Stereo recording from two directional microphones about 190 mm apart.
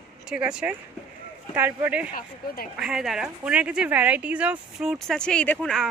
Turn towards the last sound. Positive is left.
turn(degrees=0)  # may be behind; listen again after turning